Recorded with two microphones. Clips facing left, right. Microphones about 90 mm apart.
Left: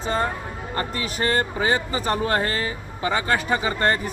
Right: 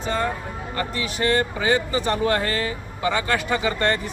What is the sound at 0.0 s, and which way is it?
Music, 35° left (ahead or behind).